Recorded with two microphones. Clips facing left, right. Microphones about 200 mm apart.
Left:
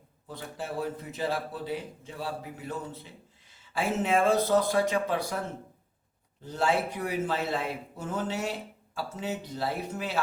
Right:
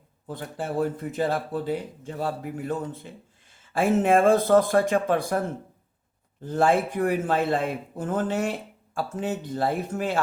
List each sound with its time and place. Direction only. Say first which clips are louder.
0.3 s a man's voice: right 5 dB; 50° right (ahead or behind)
6.4 s a man's voice: right 6 dB; 50° right (ahead or behind)